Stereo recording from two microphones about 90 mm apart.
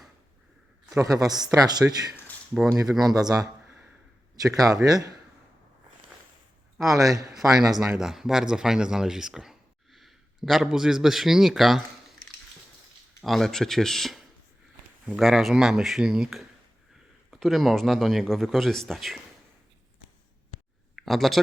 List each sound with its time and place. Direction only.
0.9 s a man's voice: 40° right (ahead or behind)
2.8 s a man's voice: 5° right (ahead or behind)
3.2 s speech: 45° right (ahead or behind)
3.7 s a sound: 10° right (ahead or behind)
4.4 s speech: 40° right (ahead or behind)
6.7 s speech: 40° right (ahead or behind)
7.9 s speech: 5° right (ahead or behind)
13.2 s a man's voice: 5° left (ahead or behind)
20.9 s speech: centre (ahead or behind)